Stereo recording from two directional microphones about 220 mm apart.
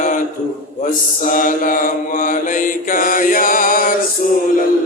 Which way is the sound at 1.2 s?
35° left (ahead or behind).